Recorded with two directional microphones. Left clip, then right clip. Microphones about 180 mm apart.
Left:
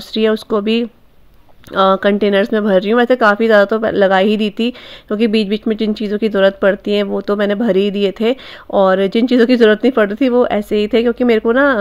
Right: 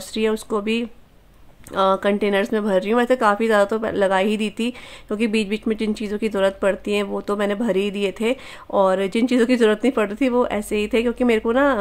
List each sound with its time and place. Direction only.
0.1 s speech: 25° left (ahead or behind)